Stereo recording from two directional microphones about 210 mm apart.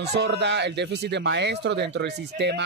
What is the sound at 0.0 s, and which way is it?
Speech, 55° right (ahead or behind).